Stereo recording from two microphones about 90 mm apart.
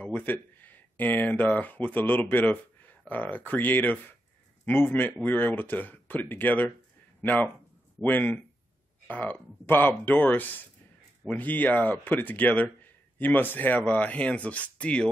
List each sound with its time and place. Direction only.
0.0 s speech: 20° left (ahead or behind)